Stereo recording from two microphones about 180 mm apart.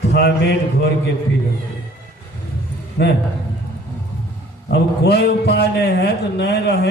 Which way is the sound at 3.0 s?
60° left (ahead or behind).